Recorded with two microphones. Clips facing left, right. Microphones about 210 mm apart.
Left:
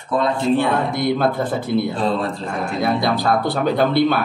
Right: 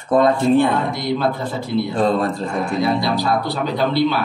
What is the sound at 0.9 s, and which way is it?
Speech, 50° left (ahead or behind).